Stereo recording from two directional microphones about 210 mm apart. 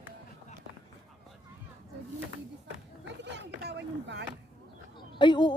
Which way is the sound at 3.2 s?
55° right (ahead or behind).